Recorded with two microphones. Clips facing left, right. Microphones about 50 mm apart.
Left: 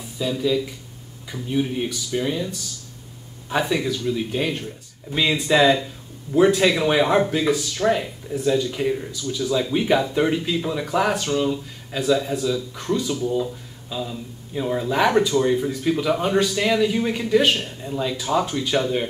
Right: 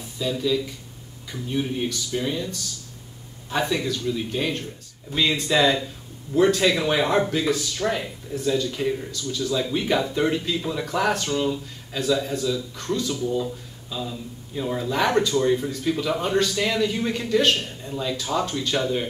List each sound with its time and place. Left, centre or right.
0.2 s speech: centre